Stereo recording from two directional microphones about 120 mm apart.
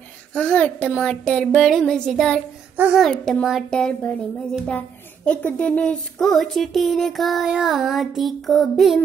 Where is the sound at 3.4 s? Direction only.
Centre (ahead or behind).